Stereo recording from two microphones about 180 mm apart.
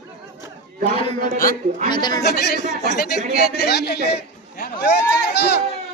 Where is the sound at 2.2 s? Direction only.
65° left (ahead or behind).